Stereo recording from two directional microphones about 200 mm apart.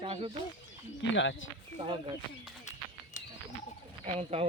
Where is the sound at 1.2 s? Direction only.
65° left (ahead or behind).